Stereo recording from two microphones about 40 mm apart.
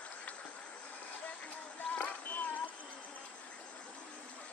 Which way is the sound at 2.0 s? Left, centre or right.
Left.